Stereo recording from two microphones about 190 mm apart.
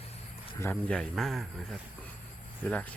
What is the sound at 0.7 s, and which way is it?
A man's voice, centre (ahead or behind).